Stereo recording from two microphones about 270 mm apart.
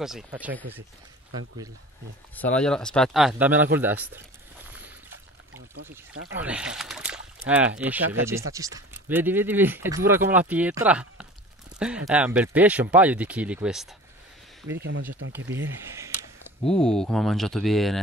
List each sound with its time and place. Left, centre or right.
0.0 s speech: centre
2.3 s speech: centre
6.3 s speech: centre
15.4 s speech: right
15.8 s speech: centre
16.6 s speech: centre